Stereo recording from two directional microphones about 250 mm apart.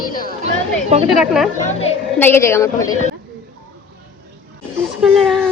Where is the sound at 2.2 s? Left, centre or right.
Centre.